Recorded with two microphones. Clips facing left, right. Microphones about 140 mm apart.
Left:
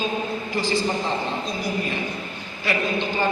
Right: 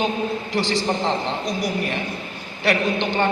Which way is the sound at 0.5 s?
75° right (ahead or behind).